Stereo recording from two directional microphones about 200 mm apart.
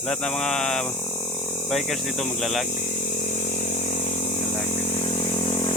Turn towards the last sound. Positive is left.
turn(degrees=25)  # may be behind; listen again after turning